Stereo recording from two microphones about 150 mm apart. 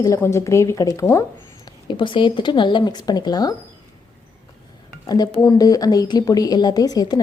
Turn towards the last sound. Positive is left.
turn(degrees=25)  # may be behind; listen again after turning